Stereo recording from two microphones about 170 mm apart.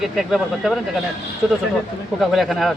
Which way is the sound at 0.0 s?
Centre (ahead or behind).